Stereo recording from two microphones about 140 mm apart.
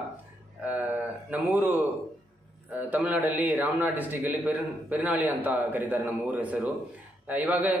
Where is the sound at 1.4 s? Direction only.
10° right (ahead or behind).